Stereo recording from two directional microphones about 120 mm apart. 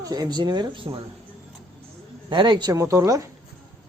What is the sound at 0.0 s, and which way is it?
Speech, 35° right (ahead or behind).